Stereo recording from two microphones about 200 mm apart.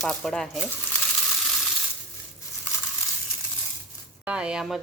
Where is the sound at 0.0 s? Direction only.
Centre (ahead or behind).